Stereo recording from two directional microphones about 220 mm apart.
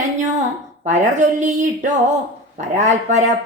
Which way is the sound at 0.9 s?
35° right (ahead or behind).